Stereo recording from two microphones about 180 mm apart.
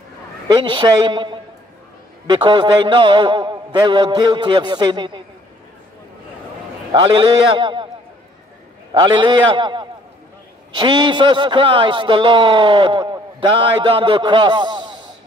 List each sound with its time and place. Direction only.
0.5 s a man's voice: 25° right (ahead or behind)
6.9 s a man's voice: 25° right (ahead or behind)
8.9 s a man's voice: 25° right (ahead or behind)